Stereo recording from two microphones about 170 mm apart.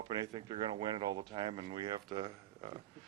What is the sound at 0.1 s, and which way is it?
A man's voice, 25° right (ahead or behind).